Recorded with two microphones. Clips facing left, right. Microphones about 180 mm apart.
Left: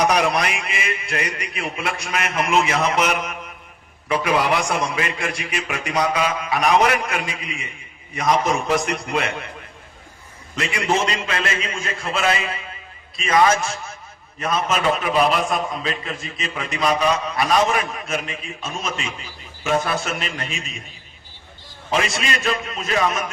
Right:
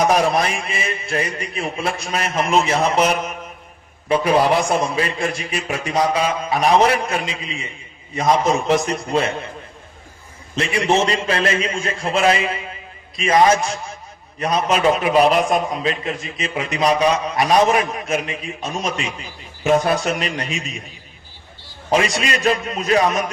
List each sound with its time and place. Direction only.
0.3 s a man's voice: 30° right (ahead or behind)
10.5 s a man's voice: 30° right (ahead or behind)
21.8 s a man's voice: 40° right (ahead or behind)